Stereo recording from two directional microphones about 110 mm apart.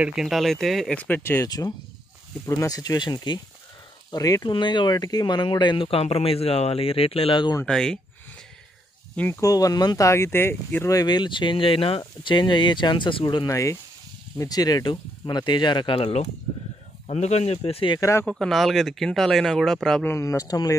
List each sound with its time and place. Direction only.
0.0 s speech: 5° right (ahead or behind)
0.9 s speech: 15° left (ahead or behind)
1.4 s speech: 35° left (ahead or behind); by 7.4 s 60° left (ahead or behind)
7.6 s speech: 5° left (ahead or behind)
9.3 s speech: 30° left (ahead or behind)
10.9 s speech: 35° left (ahead or behind)
13.5 s speech: 30° left (ahead or behind); by 16.0 s 45° left (ahead or behind)
16.0 s speech: 75° left (ahead or behind)
18.3 s speech: centre (ahead or behind)
20.1 s speech: 25° left (ahead or behind)